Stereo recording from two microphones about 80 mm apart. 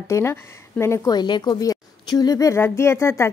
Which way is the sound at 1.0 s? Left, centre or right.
Left.